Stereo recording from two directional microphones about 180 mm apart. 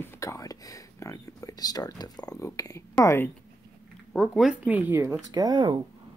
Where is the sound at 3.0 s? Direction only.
15° left (ahead or behind).